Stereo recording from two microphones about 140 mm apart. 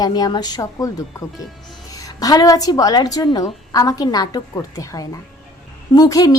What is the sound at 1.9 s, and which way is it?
A woman's voice, 25° left (ahead or behind).